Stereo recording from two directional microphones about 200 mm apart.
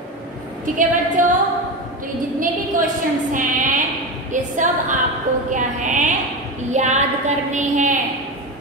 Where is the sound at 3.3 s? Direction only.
40° right (ahead or behind).